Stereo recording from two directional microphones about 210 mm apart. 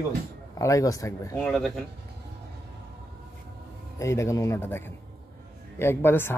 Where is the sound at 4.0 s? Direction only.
15° left (ahead or behind).